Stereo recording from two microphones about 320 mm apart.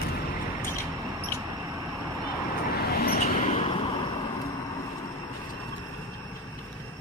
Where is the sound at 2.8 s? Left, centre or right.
Left.